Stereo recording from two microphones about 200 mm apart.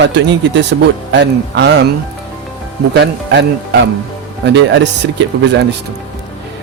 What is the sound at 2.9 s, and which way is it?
Speech, 60° right (ahead or behind).